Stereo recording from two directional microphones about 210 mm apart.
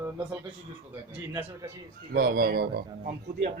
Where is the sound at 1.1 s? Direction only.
10° right (ahead or behind).